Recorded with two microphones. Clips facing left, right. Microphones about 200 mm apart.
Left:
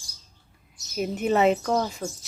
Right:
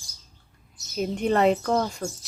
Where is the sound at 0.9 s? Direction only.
5° left (ahead or behind).